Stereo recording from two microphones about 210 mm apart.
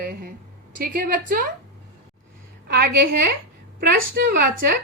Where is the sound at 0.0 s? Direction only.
45° right (ahead or behind).